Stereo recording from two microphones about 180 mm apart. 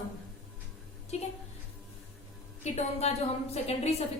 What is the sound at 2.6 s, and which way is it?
A woman's voice, 40° left (ahead or behind).